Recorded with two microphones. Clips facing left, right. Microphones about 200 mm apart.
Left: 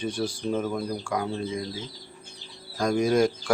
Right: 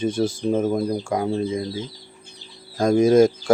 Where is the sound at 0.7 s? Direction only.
25° right (ahead or behind).